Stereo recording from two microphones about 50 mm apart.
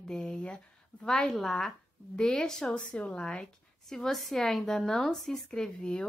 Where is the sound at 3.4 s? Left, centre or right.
Centre.